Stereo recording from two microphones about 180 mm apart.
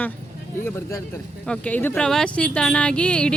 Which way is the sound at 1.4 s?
5° left (ahead or behind).